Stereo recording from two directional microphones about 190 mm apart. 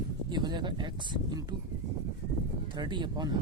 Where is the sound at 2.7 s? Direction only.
25° right (ahead or behind).